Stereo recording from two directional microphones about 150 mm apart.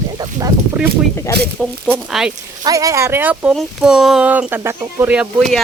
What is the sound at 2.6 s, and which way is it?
Speech, 25° right (ahead or behind).